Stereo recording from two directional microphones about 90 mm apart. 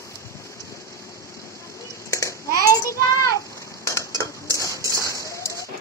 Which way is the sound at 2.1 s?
35° left (ahead or behind).